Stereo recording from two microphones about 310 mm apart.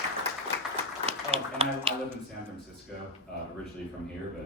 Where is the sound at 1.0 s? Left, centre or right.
Centre.